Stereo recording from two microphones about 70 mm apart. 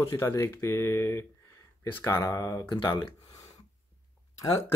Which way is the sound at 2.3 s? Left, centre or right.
Left.